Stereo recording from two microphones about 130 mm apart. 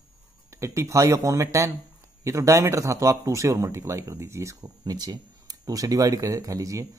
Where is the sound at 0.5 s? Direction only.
20° right (ahead or behind).